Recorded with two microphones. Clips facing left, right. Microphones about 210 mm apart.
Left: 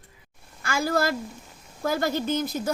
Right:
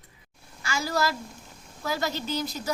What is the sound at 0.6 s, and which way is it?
A woman's voice, 55° left (ahead or behind).